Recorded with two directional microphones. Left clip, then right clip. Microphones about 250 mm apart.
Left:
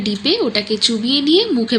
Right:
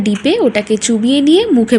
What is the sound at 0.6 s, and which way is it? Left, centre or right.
Speech, right.